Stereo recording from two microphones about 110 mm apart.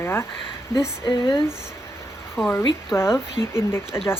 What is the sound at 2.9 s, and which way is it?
Speech, 25° left (ahead or behind).